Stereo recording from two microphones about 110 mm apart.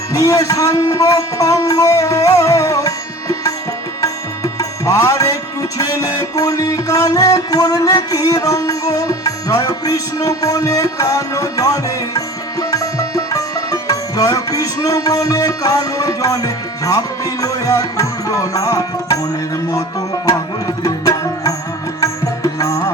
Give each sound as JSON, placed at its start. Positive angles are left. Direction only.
{"t": 0.1, "sound": "speech", "side_deg": 30}
{"t": 4.0, "sound": "music", "side_deg": 30}
{"t": 20.8, "sound": "music", "side_deg": 30}
{"t": 22.5, "sound": "music", "side_deg": 30}